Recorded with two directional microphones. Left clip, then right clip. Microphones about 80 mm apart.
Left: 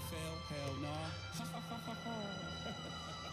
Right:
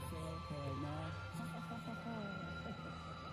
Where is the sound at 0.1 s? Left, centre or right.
Left.